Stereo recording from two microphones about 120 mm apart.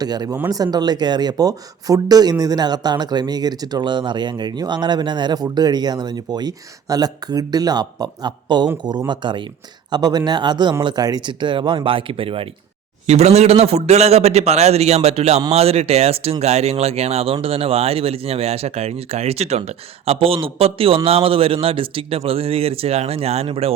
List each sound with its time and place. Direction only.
0.0 s speech: 35° right (ahead or behind); by 12.5 s 50° right (ahead or behind)
13.1 s speech: 65° right (ahead or behind)